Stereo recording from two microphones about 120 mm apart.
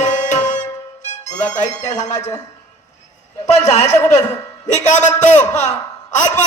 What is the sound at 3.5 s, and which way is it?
Speech, 65° left (ahead or behind).